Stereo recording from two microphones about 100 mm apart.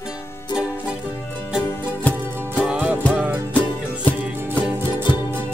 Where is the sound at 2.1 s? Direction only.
20° right (ahead or behind).